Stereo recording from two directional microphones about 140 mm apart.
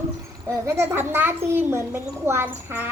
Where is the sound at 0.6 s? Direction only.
20° right (ahead or behind).